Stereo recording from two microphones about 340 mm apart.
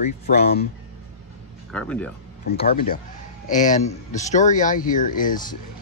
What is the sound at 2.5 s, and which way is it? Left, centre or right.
Speech, left.